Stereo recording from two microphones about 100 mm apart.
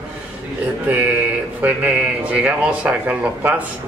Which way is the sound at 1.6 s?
15° right (ahead or behind).